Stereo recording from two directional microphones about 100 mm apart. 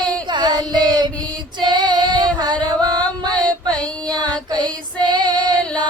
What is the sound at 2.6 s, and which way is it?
Music, 40° right (ahead or behind).